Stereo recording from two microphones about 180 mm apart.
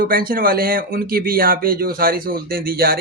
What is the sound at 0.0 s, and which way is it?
Speech, 55° right (ahead or behind).